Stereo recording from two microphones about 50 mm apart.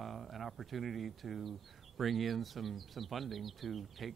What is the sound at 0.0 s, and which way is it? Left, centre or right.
Speech, centre.